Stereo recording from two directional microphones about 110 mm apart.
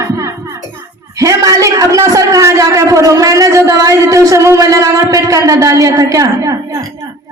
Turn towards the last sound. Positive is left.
turn(degrees=-30)  # may be behind; listen again after turning